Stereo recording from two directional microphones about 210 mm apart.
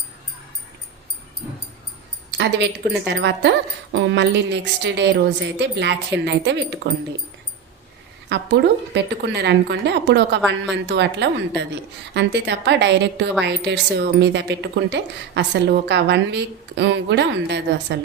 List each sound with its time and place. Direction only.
2.4 s a woman's voice: 55° right (ahead or behind)
8.3 s a woman's voice: 55° right (ahead or behind)